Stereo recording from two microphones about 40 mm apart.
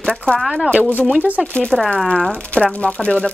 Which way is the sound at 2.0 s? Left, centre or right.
Left.